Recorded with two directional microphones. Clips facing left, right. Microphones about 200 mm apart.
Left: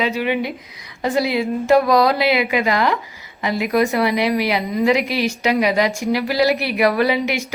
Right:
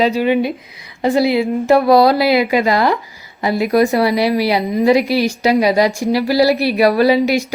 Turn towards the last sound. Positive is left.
turn(degrees=-35)  # may be behind; listen again after turning